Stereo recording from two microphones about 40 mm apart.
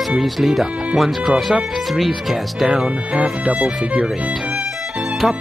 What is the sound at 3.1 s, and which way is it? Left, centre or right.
Speech, right.